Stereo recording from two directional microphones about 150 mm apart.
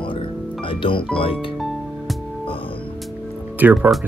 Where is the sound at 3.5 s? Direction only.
10° right (ahead or behind).